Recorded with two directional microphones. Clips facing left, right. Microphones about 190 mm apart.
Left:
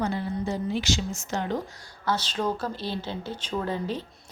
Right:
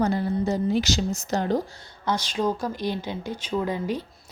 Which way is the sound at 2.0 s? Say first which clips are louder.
Right 2 dB; 10° right (ahead or behind).